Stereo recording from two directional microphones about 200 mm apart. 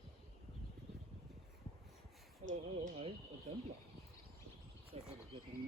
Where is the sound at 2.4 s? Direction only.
35° right (ahead or behind).